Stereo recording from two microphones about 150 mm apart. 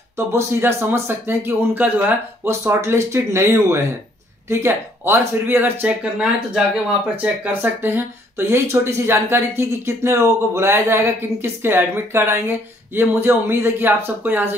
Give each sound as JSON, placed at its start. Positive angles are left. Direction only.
{"t": 0.3, "sound": "speech", "side_deg": -15}